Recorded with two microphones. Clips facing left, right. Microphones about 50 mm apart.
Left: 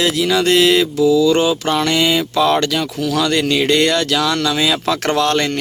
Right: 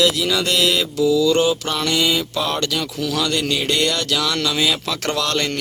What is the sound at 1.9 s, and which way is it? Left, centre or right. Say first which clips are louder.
Speech: left 4 dB; left.